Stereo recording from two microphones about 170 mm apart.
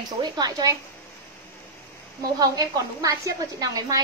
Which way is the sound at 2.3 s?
20° right (ahead or behind).